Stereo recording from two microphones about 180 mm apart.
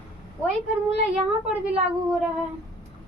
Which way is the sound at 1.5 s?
5° right (ahead or behind).